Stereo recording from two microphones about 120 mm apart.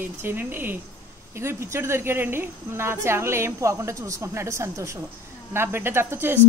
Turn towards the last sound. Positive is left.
turn(degrees=-20)  # may be behind; listen again after turning